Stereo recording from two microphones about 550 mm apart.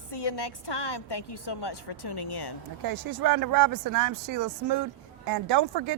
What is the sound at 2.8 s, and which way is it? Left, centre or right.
Speech, right.